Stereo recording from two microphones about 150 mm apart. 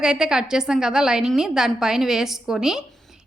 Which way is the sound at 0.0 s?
5° right (ahead or behind).